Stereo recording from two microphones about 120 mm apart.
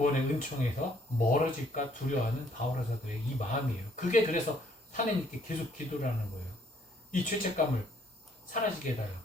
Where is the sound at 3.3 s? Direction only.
90° left.